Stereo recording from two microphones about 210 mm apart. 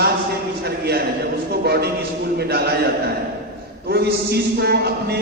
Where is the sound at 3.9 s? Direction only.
50° right (ahead or behind).